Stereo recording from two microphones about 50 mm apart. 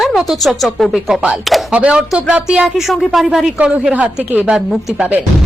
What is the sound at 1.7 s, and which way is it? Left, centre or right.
Speech, right.